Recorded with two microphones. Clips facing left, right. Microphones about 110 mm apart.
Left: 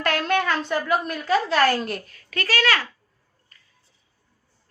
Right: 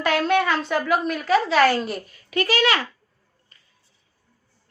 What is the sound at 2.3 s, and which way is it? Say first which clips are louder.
Speech: right 3 dB; 15° right (ahead or behind).